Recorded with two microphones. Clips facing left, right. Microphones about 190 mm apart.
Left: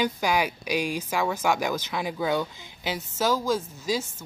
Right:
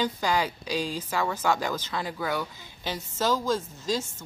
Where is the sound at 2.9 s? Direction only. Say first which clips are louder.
Left 1 dB; 10° left (ahead or behind).